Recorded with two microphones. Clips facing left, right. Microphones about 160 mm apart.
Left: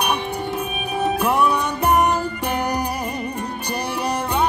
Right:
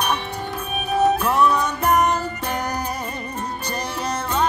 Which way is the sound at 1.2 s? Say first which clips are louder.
Even; 15° left (ahead or behind).